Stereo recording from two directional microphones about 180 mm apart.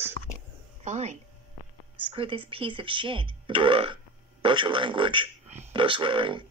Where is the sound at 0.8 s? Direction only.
40° right (ahead or behind).